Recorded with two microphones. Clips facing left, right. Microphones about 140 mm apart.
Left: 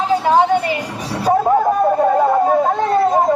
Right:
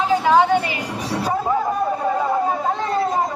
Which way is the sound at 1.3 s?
55° left (ahead or behind).